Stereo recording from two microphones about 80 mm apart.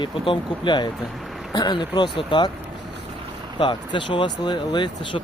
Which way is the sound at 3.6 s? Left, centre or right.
Left.